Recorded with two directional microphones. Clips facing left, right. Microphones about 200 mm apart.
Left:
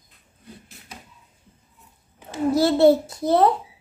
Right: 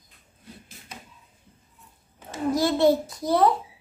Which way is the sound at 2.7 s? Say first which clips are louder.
Left 5 dB; 30° left (ahead or behind).